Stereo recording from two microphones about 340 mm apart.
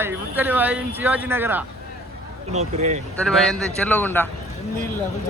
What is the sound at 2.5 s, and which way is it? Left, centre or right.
Speech, centre.